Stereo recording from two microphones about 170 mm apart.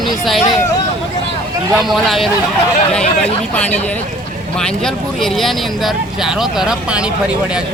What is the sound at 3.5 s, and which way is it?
Speech, 10° left (ahead or behind).